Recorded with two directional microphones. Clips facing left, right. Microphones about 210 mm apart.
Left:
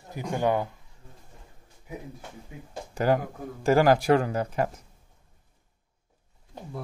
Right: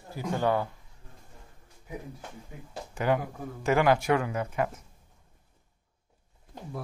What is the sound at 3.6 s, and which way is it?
Speech, 35° left (ahead or behind).